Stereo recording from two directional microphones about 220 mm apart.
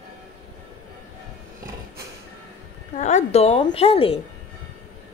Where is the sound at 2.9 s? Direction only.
30° left (ahead or behind).